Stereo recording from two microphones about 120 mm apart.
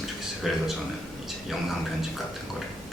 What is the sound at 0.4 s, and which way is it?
Speech, centre (ahead or behind).